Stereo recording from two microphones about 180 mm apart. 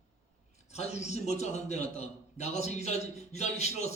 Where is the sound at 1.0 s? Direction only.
40° left (ahead or behind).